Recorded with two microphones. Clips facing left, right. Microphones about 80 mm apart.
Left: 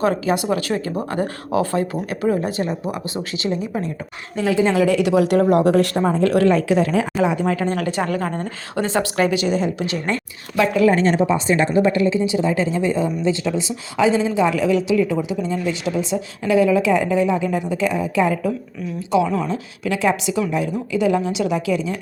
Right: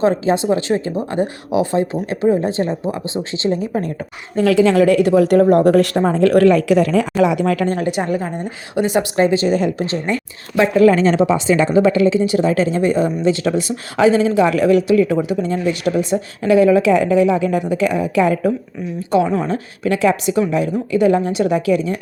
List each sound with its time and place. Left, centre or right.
0.0 s speech: right
4.4 s a woman's voice: right
4.7 s a woman's voice: right
7.8 s speech: right
9.1 s speech: right
10.8 s speech: right
19.1 s a woman's voice: right